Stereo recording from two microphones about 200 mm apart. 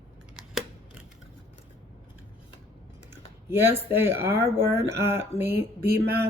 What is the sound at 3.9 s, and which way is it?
Speech, 10° right (ahead or behind).